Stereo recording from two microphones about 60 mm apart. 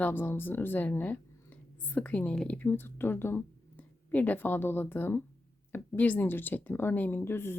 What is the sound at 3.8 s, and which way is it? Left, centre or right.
Speech, left.